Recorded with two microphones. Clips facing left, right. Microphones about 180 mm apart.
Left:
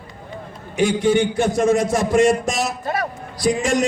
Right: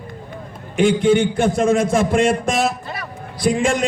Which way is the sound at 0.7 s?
55° right (ahead or behind).